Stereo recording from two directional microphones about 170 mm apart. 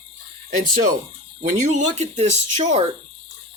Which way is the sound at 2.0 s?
40° right (ahead or behind).